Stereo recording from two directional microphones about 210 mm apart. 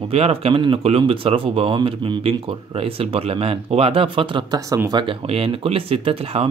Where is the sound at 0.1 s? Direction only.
30° right (ahead or behind).